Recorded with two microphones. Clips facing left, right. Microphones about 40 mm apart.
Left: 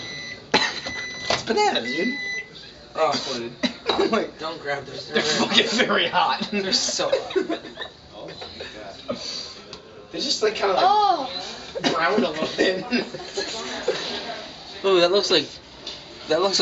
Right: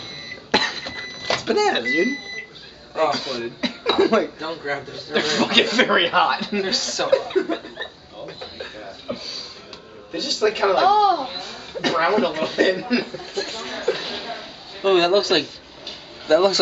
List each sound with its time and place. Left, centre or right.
0.5 s cough: centre
1.5 s speech: centre
7.7 s chuckle: centre
10.1 s a woman's voice: centre